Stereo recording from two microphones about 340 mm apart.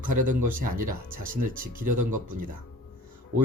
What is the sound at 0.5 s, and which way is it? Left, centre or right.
Speech, right.